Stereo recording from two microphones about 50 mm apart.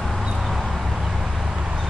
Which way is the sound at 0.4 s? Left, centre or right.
Centre.